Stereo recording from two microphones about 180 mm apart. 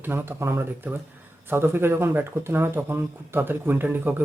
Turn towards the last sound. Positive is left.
turn(degrees=-10)  # may be behind; listen again after turning